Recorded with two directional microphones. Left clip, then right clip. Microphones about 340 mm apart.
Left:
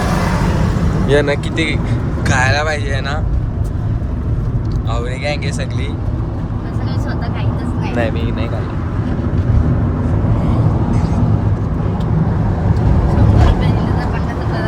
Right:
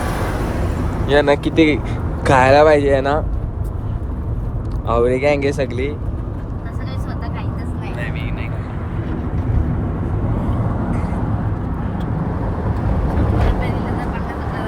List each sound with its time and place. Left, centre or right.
1.0 s speech: centre
4.9 s speech: centre